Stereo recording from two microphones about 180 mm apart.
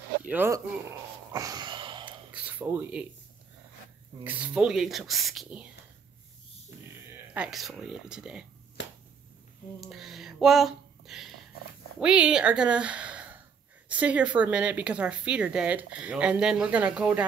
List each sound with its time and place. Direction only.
0.3 s speech: 10° right (ahead or behind)
1.3 s a sound: 20° right (ahead or behind)
2.3 s a sound: 10° right (ahead or behind)
4.2 s speech: 10° right (ahead or behind)
7.3 s speech: centre (ahead or behind)
8.8 s finger snapping: 85° left
9.8 s a woman's voice: centre (ahead or behind)